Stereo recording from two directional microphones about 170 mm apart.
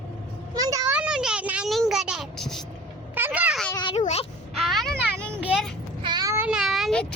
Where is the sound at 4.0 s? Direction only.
40° left (ahead or behind).